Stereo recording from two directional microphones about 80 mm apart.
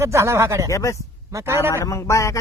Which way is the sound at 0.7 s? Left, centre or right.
Left.